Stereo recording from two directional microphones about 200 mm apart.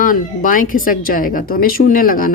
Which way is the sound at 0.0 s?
45° left (ahead or behind).